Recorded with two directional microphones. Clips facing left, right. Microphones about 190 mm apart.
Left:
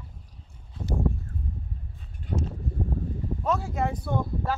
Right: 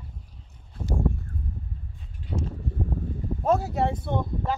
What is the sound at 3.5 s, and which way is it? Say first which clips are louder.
Speech: right 4 dB; 40° right (ahead or behind).